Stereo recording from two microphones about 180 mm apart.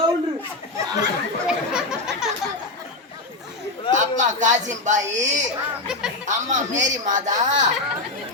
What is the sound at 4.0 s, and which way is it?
A man's voice, 45° right (ahead or behind).